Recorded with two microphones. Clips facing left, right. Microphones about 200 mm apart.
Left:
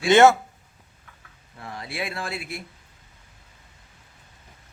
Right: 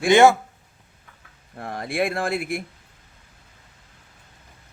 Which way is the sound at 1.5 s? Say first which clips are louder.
Right 8 dB; 50° right (ahead or behind).